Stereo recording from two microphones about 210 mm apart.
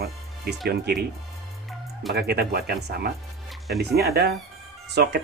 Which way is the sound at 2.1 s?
50° right (ahead or behind).